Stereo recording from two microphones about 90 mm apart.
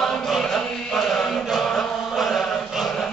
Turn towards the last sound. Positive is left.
turn(degrees=0)  # may be behind; listen again after turning